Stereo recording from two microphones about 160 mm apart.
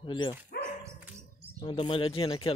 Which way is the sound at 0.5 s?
75° left (ahead or behind).